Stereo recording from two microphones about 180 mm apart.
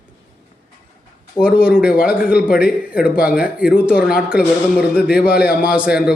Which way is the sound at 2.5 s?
55° left (ahead or behind).